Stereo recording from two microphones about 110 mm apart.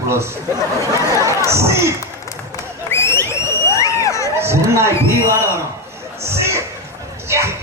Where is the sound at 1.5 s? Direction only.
25° right (ahead or behind).